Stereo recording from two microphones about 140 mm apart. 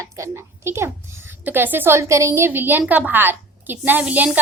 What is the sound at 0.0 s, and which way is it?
A woman's voice, 20° right (ahead or behind).